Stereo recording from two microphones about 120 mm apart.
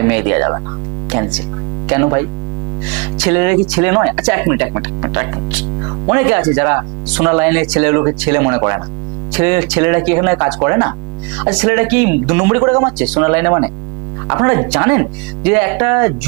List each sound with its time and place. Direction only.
0.0 s speech: 20° right (ahead or behind)
5.8 s hum: 20° right (ahead or behind)
6.5 s speech: 20° right (ahead or behind)